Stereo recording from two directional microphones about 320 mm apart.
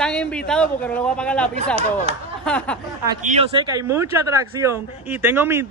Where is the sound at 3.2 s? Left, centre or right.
Centre.